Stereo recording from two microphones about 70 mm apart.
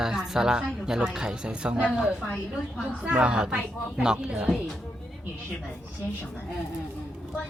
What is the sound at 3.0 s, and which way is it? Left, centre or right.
Speech, centre.